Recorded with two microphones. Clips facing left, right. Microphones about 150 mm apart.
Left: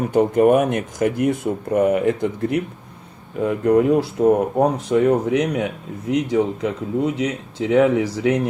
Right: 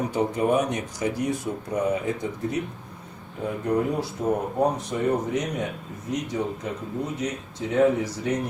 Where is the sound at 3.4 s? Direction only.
80° left.